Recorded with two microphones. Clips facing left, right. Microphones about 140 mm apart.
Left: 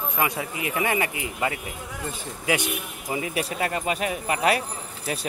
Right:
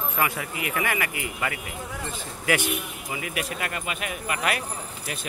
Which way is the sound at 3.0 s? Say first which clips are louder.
Left 5 dB; 30° left (ahead or behind).